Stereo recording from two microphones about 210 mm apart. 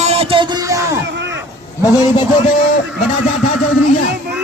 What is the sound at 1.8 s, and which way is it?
Speech, 15° left (ahead or behind).